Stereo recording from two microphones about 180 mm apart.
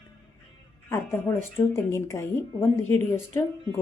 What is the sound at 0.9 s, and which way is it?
A woman's voice, 15° left (ahead or behind).